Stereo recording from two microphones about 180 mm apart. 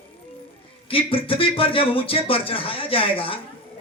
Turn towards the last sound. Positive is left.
turn(degrees=30)  # may be behind; listen again after turning